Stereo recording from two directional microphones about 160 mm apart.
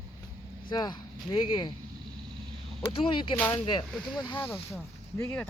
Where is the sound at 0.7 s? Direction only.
25° left (ahead or behind).